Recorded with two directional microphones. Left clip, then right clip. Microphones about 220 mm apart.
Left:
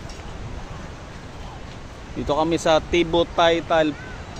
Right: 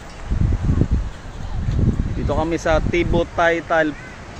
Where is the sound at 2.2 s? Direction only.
15° left (ahead or behind).